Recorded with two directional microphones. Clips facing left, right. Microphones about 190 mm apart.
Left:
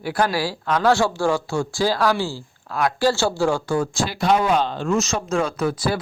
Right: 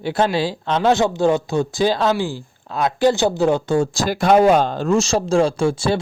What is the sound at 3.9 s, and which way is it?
Speech, 40° right (ahead or behind).